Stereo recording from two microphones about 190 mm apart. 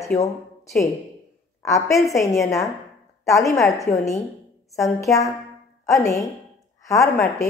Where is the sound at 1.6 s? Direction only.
15° left (ahead or behind).